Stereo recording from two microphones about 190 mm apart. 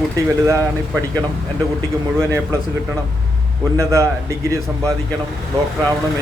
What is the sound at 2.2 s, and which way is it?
A man's voice, 15° right (ahead or behind).